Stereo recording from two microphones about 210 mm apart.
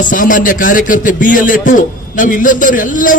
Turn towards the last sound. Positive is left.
turn(degrees=40)  # may be behind; listen again after turning